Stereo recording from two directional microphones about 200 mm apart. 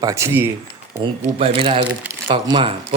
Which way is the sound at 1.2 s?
30° right (ahead or behind).